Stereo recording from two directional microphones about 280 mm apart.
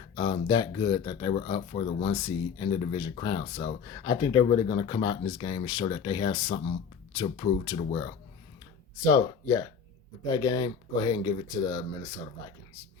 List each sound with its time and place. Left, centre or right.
0.2 s speech: centre